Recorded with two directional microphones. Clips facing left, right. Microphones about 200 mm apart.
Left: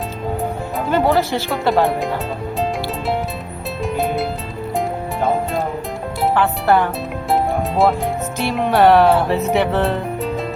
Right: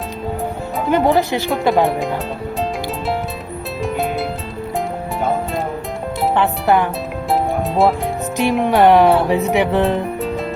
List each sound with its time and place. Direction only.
0.9 s speech: 15° right (ahead or behind)
3.8 s music: centre (ahead or behind)
6.3 s speech: 20° right (ahead or behind)
7.3 s music: centre (ahead or behind)
8.4 s speech: 15° right (ahead or behind)
10.2 s music: centre (ahead or behind)